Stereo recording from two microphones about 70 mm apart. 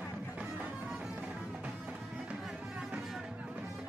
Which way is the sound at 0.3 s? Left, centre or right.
Centre.